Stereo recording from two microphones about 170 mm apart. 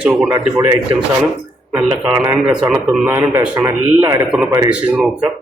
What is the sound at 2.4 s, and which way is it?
A man's voice, 5° right (ahead or behind).